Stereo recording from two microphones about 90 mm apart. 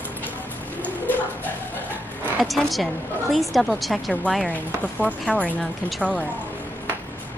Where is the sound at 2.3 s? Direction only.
Centre (ahead or behind).